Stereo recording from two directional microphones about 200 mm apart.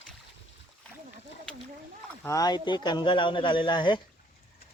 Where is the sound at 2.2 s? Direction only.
20° left (ahead or behind).